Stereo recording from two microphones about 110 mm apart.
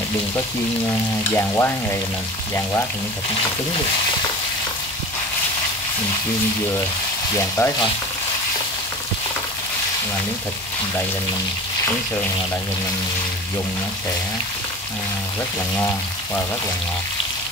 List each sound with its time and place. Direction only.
1.3 s frying: 25° left (ahead or behind)
7.3 s frying: 25° left (ahead or behind)